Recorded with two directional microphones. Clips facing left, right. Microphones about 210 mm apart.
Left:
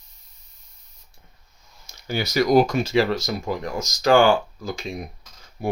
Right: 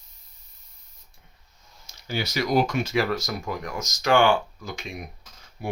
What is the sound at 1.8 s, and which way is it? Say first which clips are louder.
Speech: left 3 dB; 45° left (ahead or behind).